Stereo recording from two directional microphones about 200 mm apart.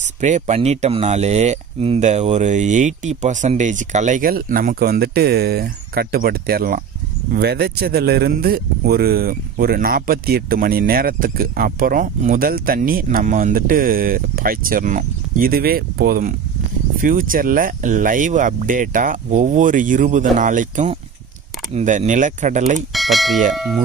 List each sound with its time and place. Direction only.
0.2 s speech: 35° right (ahead or behind)
22.9 s speech: centre (ahead or behind)